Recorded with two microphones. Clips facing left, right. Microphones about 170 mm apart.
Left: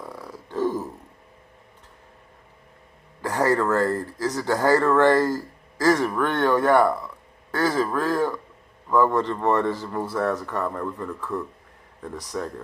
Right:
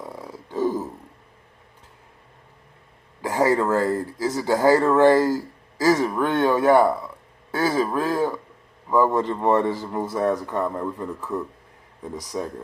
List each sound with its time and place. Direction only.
0.0 s burping: 15° right (ahead or behind)
3.2 s a man's voice: 10° right (ahead or behind)